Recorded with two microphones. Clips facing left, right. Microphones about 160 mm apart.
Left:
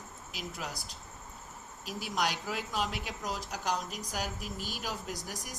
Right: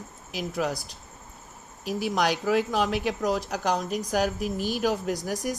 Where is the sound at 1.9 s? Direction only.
80° right.